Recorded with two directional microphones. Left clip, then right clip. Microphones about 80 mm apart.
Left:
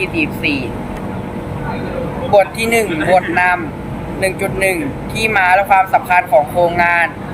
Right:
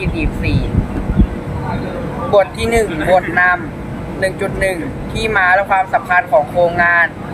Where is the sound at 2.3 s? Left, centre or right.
Right.